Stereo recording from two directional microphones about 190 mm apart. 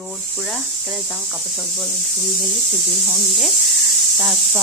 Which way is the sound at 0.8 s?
Centre (ahead or behind).